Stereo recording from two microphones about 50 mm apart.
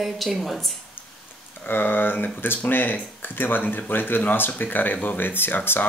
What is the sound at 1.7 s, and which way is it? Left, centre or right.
Speech, left.